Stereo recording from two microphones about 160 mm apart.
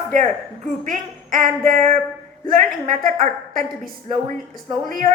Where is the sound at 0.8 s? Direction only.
55° right (ahead or behind).